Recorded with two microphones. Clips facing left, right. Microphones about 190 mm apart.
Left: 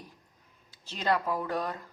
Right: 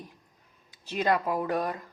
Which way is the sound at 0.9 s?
15° right (ahead or behind).